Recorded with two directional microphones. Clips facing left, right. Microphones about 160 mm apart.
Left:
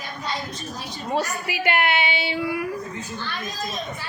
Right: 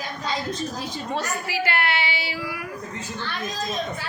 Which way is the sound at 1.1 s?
15° left (ahead or behind).